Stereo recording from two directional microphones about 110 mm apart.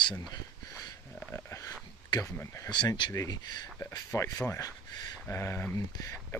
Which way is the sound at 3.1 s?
35° left (ahead or behind).